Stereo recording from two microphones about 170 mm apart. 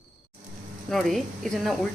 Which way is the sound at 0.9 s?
Centre (ahead or behind).